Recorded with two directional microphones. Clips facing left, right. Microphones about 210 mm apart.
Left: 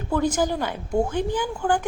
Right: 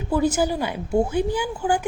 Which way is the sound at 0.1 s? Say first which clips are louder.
Right 2 dB; 10° right (ahead or behind).